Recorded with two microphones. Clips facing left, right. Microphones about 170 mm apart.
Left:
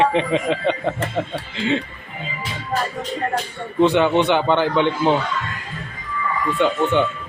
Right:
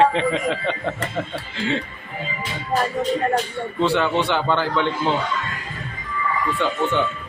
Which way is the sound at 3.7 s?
20° left (ahead or behind).